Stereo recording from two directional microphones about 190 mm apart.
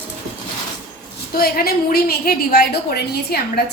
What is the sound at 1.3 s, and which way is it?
A woman's voice, 50° left (ahead or behind).